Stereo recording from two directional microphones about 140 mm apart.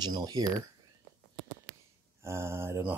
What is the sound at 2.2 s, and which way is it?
Speech, 20° right (ahead or behind).